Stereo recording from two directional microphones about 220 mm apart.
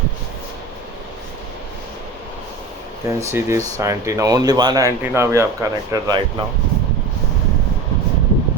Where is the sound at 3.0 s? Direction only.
15° right (ahead or behind).